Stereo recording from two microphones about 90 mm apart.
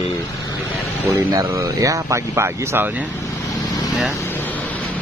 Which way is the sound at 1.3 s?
35° right (ahead or behind).